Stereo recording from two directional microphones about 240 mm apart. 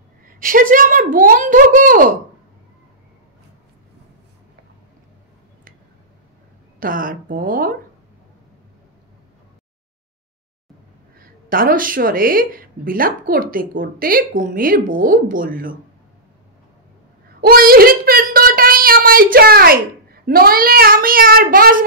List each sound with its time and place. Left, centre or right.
0.4 s speech: right
6.8 s speech: right
11.4 s speech: right
17.4 s speech: right